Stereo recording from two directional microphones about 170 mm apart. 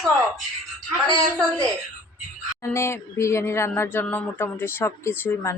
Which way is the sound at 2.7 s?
15° left (ahead or behind).